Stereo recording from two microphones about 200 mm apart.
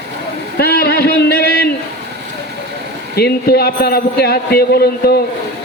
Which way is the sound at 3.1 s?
50° left (ahead or behind).